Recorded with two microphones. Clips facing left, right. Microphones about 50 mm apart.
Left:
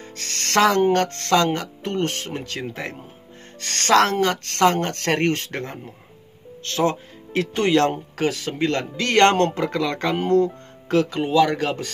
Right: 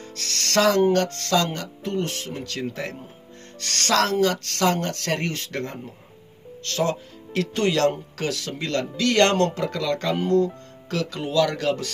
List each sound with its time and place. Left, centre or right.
0.0 s speech: left
2.4 s speech: left
3.9 s speech: left
5.5 s speech: left